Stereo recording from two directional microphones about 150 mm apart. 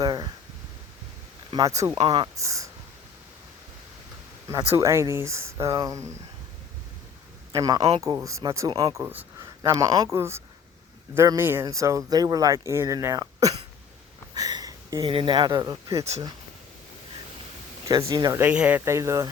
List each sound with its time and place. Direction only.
0.0 s a sound: 25° right (ahead or behind)
1.5 s speech: 25° right (ahead or behind)
2.0 s speech: 35° right (ahead or behind)
2.3 s speech: 20° right (ahead or behind)
4.7 s speech: 20° right (ahead or behind)
7.5 s a man's voice: 25° right (ahead or behind)
7.8 s speech: 40° right (ahead or behind)
8.0 s speech: 20° right (ahead or behind)
8.7 s speech: 35° right (ahead or behind)
9.0 s speech: 15° right (ahead or behind)
14.3 s a sound: 25° right (ahead or behind)
15.0 s speech: 35° right (ahead or behind)
17.8 s speech: 25° right (ahead or behind)
18.3 s speech: 10° right (ahead or behind)